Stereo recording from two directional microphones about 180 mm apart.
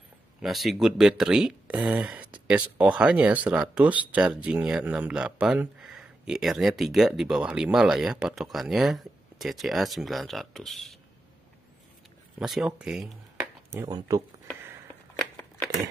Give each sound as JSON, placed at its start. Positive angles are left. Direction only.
{"t": 0.4, "sound": "speech", "side_deg": 0}
{"t": 12.4, "sound": "speech", "side_deg": 0}
{"t": 13.7, "sound": "speech", "side_deg": -20}